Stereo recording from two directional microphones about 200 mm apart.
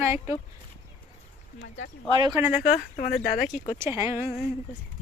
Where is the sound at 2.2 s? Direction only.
15° right (ahead or behind).